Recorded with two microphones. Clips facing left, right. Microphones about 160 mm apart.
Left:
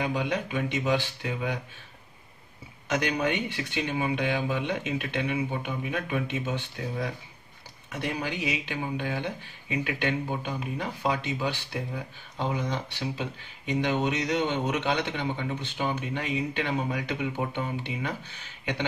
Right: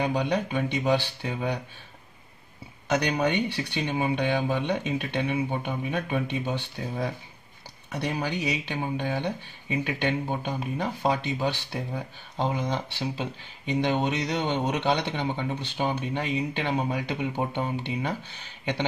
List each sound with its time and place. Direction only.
0.0 s speech: 35° right (ahead or behind)
2.9 s speech: 35° right (ahead or behind)